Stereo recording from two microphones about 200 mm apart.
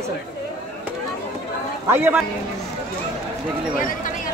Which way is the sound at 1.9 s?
10° right (ahead or behind).